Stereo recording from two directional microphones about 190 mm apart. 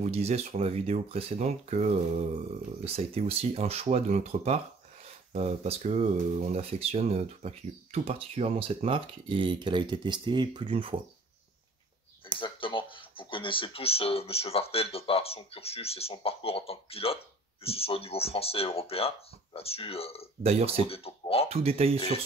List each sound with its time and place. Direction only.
0.0 s speech: 35° right (ahead or behind)
12.4 s speech: 25° left (ahead or behind)
20.4 s speech: 30° right (ahead or behind)
20.9 s speech: 30° left (ahead or behind)
21.5 s speech: 30° right (ahead or behind)